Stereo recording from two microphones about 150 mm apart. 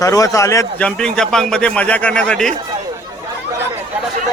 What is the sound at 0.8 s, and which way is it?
A man's voice, 5° left (ahead or behind).